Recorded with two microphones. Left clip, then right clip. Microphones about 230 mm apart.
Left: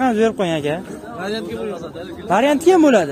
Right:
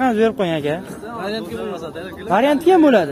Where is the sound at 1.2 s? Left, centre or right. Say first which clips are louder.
Left 1 dB; left.